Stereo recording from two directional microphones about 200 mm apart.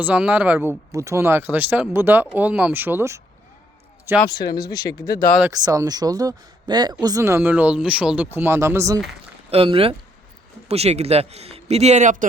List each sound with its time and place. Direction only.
0.0 s speech: 5° right (ahead or behind)
4.3 s speech: 20° left (ahead or behind)
5.5 s speech: 20° right (ahead or behind)
9.5 s a man's voice: 30° right (ahead or behind)